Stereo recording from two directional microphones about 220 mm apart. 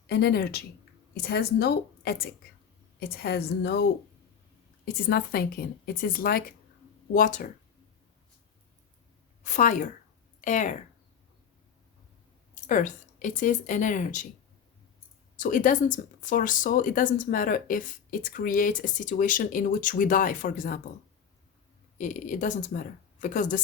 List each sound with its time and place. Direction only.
0.1 s a woman's voice: 45° left (ahead or behind)
5.0 s a woman's voice: 45° left (ahead or behind)
9.4 s speech: 35° left (ahead or behind)
12.6 s speech: 35° left (ahead or behind)
15.4 s speech: 35° left (ahead or behind)
21.9 s speech: 35° left (ahead or behind)